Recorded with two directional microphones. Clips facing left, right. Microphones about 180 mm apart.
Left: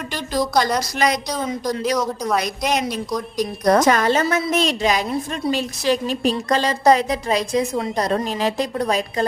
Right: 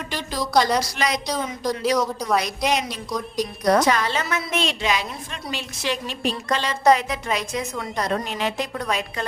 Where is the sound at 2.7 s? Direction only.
50° left (ahead or behind).